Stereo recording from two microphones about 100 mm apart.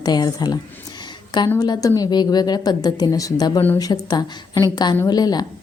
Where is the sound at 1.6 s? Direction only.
40° left (ahead or behind).